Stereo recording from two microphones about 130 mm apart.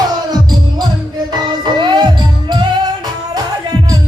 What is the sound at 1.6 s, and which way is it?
Music, 35° right (ahead or behind).